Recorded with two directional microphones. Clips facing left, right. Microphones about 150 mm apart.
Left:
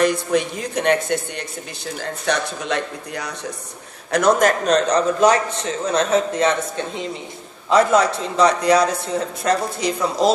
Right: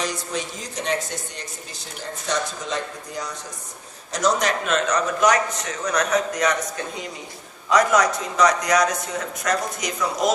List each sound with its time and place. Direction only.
0.0 s a man's voice: 60° left (ahead or behind); by 10.3 s 30° left (ahead or behind)